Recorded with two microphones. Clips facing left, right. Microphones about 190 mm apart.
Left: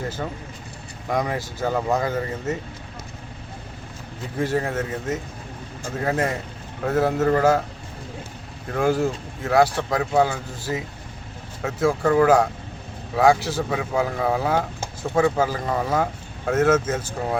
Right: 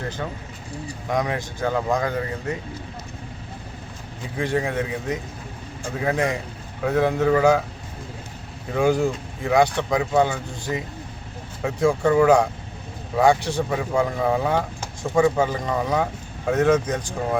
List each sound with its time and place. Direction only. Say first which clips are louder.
1.1 s speech: even; 5° left (ahead or behind)
4.4 s speech: even; 5° left (ahead or behind)
8.7 s speech: right 1 dB; centre (ahead or behind)